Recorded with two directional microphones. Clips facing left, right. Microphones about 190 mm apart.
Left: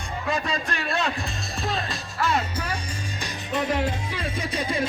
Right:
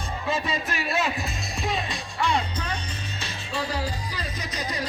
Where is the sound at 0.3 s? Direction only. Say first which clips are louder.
Left 1 dB; 5° right (ahead or behind).